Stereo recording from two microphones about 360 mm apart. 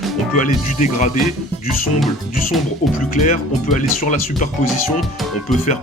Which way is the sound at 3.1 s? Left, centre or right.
Left.